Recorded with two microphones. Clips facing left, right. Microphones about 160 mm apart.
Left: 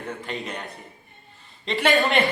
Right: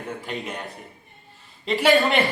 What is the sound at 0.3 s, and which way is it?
A man's voice, centre (ahead or behind).